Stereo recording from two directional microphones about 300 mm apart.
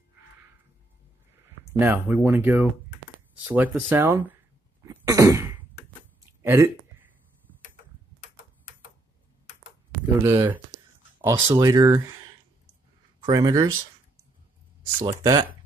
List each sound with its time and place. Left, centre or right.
1.7 s speech: centre
4.8 s cough: centre
6.4 s speech: centre
10.2 s speech: centre
13.2 s speech: centre
15.0 s speech: centre